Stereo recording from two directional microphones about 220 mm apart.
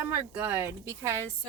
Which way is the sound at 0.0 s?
10° right (ahead or behind).